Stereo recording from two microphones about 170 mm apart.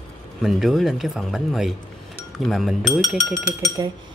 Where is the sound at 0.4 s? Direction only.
Centre (ahead or behind).